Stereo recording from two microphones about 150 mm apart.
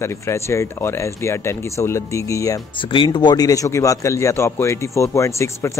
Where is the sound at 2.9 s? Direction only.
30° left (ahead or behind).